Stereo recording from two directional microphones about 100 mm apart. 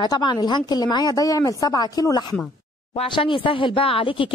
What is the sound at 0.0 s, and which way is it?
Speech, 45° left (ahead or behind).